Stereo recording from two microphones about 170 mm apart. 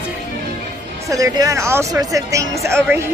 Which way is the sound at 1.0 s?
20° right (ahead or behind).